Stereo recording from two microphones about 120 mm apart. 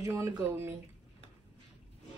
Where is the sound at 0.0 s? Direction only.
20° right (ahead or behind).